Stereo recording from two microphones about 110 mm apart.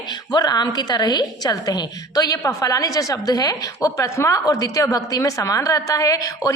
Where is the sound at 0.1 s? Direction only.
40° left (ahead or behind).